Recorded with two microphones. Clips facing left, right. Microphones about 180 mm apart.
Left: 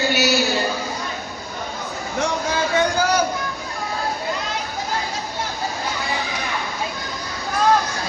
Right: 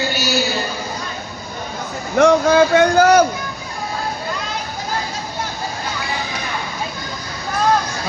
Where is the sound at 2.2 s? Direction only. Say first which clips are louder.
Right 11 dB; 60° right (ahead or behind).